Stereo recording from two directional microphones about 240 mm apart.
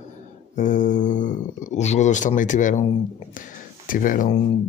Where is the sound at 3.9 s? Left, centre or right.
Left.